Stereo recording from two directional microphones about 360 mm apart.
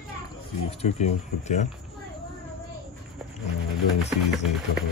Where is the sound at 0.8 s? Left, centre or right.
Centre.